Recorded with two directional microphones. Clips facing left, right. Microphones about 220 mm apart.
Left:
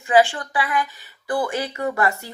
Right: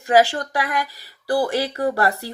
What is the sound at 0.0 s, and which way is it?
Speech, 40° right (ahead or behind).